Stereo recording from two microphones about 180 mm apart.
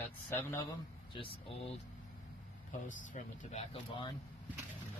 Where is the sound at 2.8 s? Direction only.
45° left (ahead or behind).